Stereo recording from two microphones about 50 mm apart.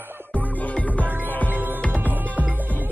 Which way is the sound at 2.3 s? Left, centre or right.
Right.